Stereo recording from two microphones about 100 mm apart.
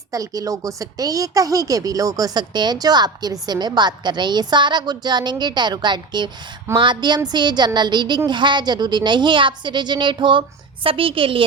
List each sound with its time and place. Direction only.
0.1 s a woman's voice: 35° right (ahead or behind); by 10.4 s 55° right (ahead or behind)
10.8 s a woman's voice: 65° right (ahead or behind)